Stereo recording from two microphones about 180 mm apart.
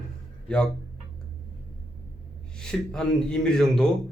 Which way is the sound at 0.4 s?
5° left (ahead or behind).